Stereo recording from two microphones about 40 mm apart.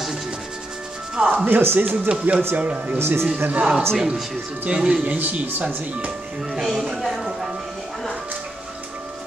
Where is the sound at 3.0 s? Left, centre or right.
Right.